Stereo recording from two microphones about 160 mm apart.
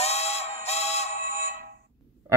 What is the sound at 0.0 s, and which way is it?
Music, 40° left (ahead or behind).